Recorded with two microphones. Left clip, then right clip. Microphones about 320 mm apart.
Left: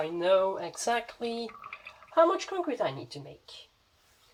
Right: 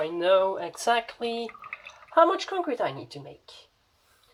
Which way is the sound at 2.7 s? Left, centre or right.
Right.